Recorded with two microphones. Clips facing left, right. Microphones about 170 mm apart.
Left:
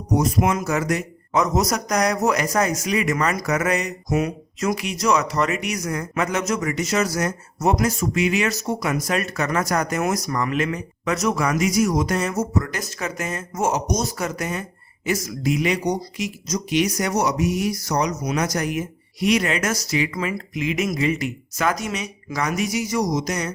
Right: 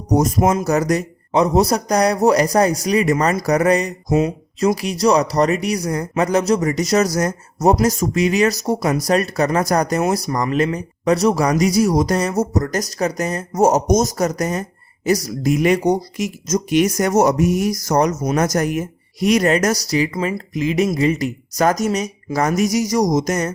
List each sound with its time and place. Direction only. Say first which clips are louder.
0.1 s speech: right 4 dB; 45° right (ahead or behind)